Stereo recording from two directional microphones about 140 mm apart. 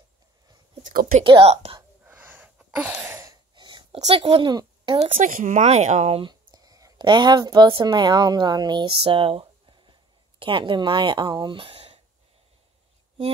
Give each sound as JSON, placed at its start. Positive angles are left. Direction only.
{"t": 1.1, "sound": "speech", "side_deg": -40}
{"t": 2.0, "sound": "a sound", "side_deg": -15}
{"t": 3.3, "sound": "cough", "side_deg": -30}
{"t": 4.0, "sound": "speech", "side_deg": -45}
{"t": 4.5, "sound": "a child's voice", "side_deg": -30}
{"t": 5.2, "sound": "speech", "side_deg": -65}
{"t": 6.5, "sound": "a woman's voice", "side_deg": -25}